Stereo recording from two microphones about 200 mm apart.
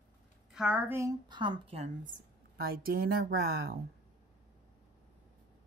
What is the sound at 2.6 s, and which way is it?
Speech, 50° right (ahead or behind).